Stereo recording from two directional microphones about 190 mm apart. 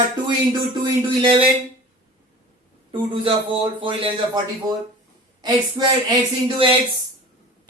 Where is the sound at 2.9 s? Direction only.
25° right (ahead or behind).